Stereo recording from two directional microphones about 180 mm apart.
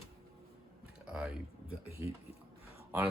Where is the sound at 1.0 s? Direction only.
5° right (ahead or behind).